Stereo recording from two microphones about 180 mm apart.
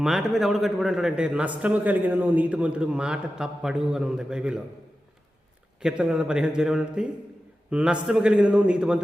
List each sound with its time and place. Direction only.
0.0 s a man's voice: centre (ahead or behind)
5.8 s a man's voice: 5° right (ahead or behind)